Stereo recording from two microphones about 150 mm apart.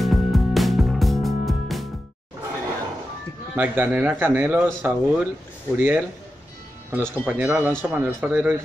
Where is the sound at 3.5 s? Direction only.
15° right (ahead or behind).